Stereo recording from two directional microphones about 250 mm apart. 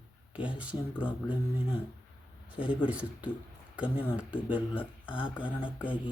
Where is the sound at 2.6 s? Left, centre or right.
Centre.